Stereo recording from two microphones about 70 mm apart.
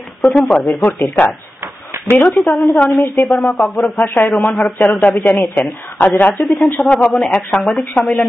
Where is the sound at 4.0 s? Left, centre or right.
Left; by 7.7 s centre.